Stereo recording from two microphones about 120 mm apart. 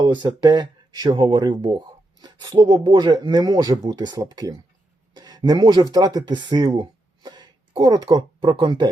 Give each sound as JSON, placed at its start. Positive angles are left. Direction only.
{"t": 0.0, "sound": "speech", "side_deg": -40}